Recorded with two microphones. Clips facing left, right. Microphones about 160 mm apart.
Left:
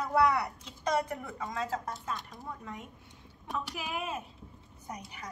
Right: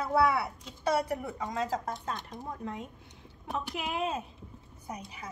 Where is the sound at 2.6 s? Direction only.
30° right (ahead or behind).